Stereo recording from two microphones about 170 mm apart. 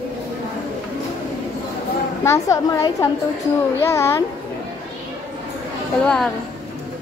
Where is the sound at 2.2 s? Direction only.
15° left (ahead or behind).